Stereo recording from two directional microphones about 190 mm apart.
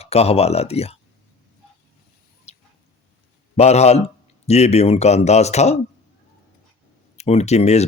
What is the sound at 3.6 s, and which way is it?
Speech, 35° left (ahead or behind).